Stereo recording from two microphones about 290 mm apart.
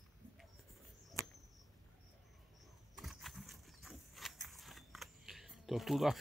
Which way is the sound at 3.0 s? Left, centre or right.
Centre.